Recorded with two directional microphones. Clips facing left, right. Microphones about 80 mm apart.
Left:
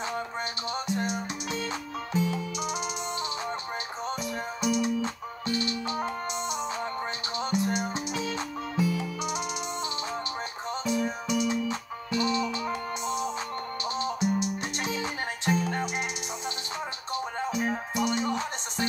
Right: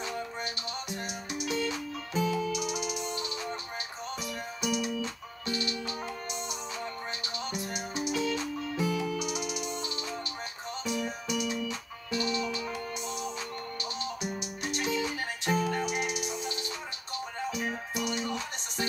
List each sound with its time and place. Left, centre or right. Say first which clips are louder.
0.8 s music: left 7 dB; left
2.2 s music: right 1 dB; centre
4.6 s music: left 4 dB; left
10.7 s music: left 5 dB; left